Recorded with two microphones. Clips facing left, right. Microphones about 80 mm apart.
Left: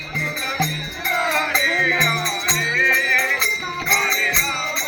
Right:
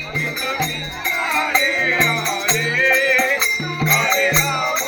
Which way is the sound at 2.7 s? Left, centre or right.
Centre.